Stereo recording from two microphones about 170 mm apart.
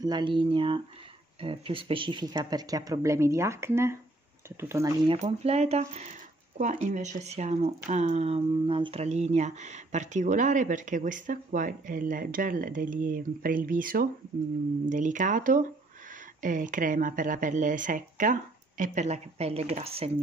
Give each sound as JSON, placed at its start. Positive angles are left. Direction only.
{"t": 0.0, "sound": "speech", "side_deg": -25}
{"t": 5.1, "sound": "speech", "side_deg": -40}